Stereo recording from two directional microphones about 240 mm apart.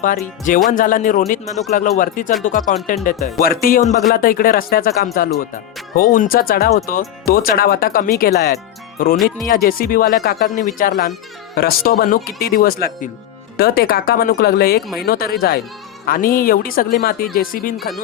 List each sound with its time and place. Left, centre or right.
0.0 s music: left
17.7 s speech: centre